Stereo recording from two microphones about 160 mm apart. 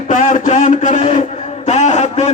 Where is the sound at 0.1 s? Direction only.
55° left (ahead or behind).